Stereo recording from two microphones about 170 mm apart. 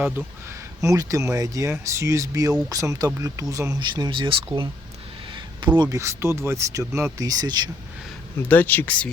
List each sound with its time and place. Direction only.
0.8 s speech: 20° right (ahead or behind)
8.4 s speech: 10° left (ahead or behind)